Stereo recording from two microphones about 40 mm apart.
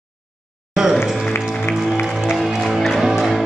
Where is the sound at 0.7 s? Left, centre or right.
Centre.